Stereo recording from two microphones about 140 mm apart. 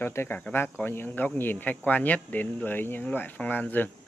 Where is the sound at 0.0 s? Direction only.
15° left (ahead or behind).